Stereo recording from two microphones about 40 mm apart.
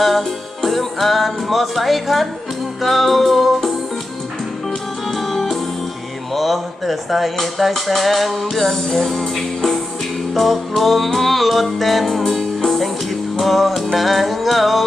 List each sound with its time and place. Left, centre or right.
0.0 s music: centre
5.0 s music: centre